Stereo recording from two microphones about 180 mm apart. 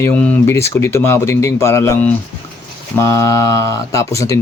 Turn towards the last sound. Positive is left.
turn(degrees=15)  # may be behind; listen again after turning